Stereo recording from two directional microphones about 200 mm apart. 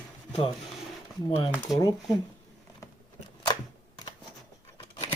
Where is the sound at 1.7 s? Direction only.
Centre (ahead or behind).